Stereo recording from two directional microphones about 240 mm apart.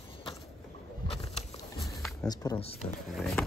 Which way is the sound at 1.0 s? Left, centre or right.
Left.